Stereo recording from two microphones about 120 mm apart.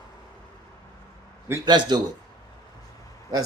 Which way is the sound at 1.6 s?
40° right (ahead or behind).